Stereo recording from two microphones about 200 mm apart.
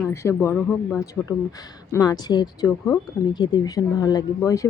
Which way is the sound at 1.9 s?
20° left (ahead or behind).